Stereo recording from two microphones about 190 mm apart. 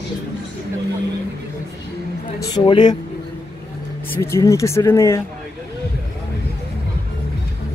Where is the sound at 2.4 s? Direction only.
25° left (ahead or behind).